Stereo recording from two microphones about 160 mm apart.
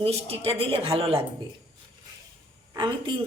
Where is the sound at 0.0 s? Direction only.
35° right (ahead or behind).